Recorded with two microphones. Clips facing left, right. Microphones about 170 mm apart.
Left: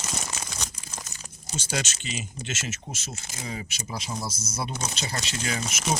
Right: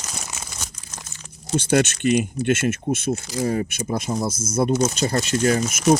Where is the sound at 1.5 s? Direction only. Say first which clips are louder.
Right 13 dB; 60° right (ahead or behind).